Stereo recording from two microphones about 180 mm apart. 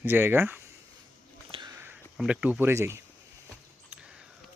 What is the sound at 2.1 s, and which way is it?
Speech, 5° right (ahead or behind).